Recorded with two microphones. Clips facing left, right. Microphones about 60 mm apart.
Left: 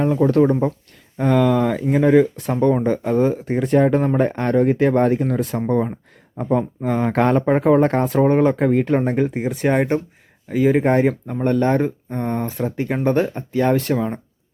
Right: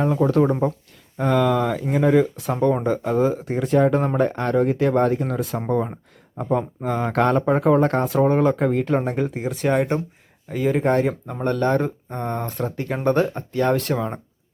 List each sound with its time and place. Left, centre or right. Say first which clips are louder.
0.0 s speech: left 3 dB; centre
9.6 s speech: left 2 dB; left
10.5 s speech: left 5 dB; centre
10.8 s speech: left 3 dB; centre